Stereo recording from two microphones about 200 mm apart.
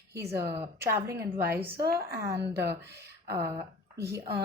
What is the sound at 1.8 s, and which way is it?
Speech, 50° right (ahead or behind).